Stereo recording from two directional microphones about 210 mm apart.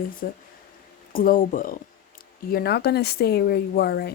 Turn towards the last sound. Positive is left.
turn(degrees=50)  # may be behind; listen again after turning